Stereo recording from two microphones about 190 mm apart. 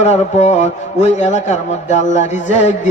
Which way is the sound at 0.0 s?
35° left (ahead or behind).